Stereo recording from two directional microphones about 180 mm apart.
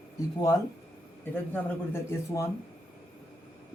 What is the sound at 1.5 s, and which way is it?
Speech, 15° left (ahead or behind).